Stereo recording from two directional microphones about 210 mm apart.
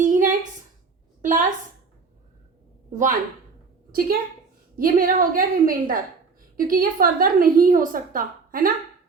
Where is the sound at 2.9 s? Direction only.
35° right (ahead or behind).